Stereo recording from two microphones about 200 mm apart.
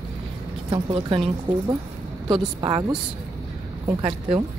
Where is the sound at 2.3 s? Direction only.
20° right (ahead or behind).